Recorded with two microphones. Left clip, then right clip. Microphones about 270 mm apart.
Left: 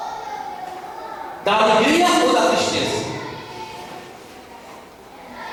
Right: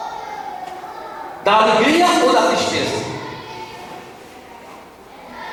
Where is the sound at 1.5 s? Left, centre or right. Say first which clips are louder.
Right 2 dB; centre.